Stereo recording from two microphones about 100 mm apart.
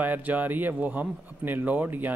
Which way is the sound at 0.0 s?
15° right (ahead or behind).